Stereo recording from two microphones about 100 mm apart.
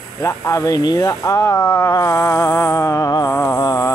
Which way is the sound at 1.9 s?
30° left (ahead or behind).